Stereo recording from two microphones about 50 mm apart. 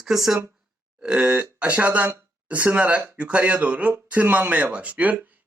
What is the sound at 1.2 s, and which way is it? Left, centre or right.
Speech, right.